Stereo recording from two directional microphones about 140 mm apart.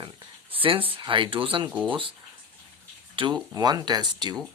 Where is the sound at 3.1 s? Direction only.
35° right (ahead or behind).